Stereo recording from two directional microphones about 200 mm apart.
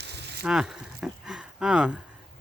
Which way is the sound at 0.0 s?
55° right (ahead or behind).